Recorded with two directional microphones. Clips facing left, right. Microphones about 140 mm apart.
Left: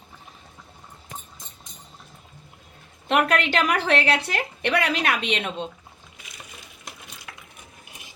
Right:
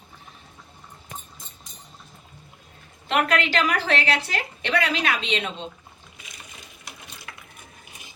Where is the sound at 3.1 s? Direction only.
50° left (ahead or behind).